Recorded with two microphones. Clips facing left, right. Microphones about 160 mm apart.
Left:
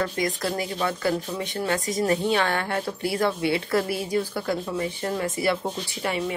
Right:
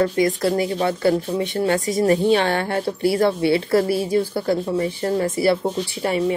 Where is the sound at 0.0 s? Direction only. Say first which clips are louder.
Right 8 dB; 30° right (ahead or behind).